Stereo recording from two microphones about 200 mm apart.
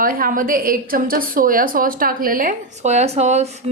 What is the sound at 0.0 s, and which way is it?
A woman's voice, 45° right (ahead or behind).